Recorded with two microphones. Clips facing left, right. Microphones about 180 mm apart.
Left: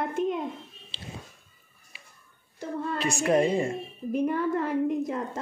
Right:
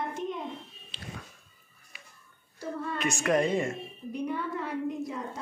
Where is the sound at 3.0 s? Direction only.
35° left (ahead or behind).